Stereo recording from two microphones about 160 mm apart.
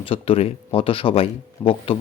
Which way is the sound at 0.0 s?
35° left (ahead or behind).